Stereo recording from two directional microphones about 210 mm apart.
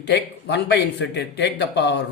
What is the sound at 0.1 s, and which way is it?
A man's voice, 55° left (ahead or behind).